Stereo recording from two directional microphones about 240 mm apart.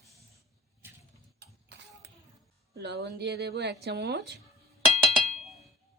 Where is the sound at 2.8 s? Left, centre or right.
Right.